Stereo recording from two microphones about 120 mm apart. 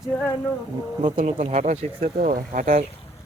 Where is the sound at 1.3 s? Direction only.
70° right (ahead or behind).